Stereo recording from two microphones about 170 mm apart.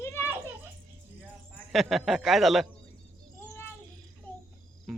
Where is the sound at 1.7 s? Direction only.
Centre (ahead or behind).